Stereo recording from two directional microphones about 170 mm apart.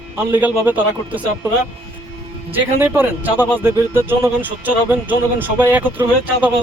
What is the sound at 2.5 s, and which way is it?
Speech, 10° right (ahead or behind).